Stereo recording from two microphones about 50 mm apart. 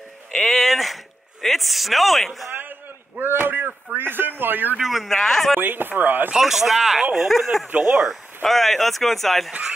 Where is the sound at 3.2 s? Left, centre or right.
Right.